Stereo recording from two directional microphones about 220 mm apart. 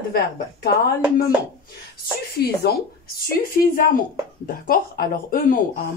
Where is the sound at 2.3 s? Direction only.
45° left (ahead or behind).